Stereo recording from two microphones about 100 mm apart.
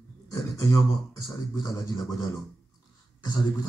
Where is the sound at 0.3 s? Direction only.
35° left (ahead or behind).